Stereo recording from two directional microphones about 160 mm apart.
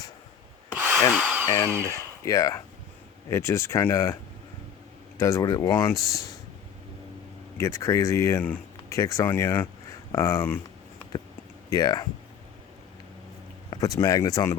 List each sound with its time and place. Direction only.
1.1 s tools: 10° right (ahead or behind)
1.5 s speech: 15° left (ahead or behind)
7.6 s speech: 20° left (ahead or behind)
11.7 s speech: 25° left (ahead or behind)
13.7 s speech: 20° left (ahead or behind)